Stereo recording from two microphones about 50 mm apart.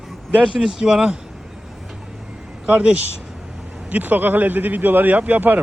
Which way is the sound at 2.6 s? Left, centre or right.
Right.